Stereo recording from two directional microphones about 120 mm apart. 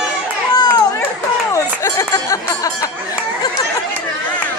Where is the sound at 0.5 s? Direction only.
35° left (ahead or behind).